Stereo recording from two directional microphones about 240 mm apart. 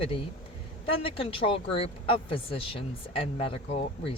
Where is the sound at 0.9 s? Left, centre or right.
Left.